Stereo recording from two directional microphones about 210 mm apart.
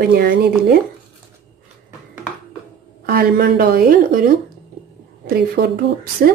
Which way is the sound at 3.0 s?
45° right (ahead or behind).